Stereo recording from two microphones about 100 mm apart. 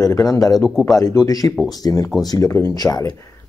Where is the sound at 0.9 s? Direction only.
35° left (ahead or behind).